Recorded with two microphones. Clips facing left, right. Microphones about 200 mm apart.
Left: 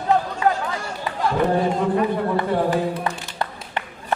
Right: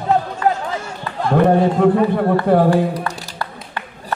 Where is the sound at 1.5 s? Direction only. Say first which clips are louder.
Right 7 dB; 60° right (ahead or behind).